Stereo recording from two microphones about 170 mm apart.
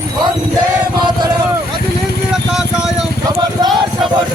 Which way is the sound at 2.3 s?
5° right (ahead or behind).